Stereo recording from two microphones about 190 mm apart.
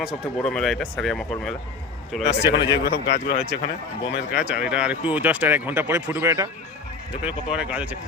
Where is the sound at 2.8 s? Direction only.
60° left (ahead or behind).